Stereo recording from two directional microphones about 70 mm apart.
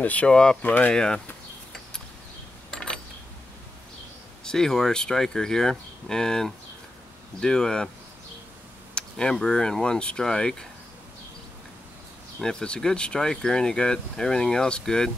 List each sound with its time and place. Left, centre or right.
0.0 s speech: centre
0.6 s speech: left
0.9 s speech: centre
2.7 s a sound: centre
4.5 s speech: centre
8.9 s speech: centre
12.4 s speech: centre